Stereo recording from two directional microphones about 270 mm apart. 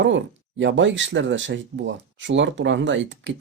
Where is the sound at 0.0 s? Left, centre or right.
Right.